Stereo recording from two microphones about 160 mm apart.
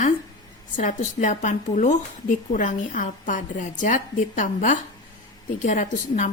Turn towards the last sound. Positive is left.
turn(degrees=55)  # may be behind; listen again after turning